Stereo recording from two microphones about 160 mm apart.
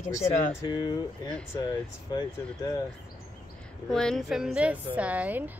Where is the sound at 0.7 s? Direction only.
25° left (ahead or behind).